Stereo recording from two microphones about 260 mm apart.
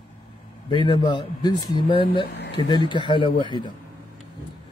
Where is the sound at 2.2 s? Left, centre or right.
Left.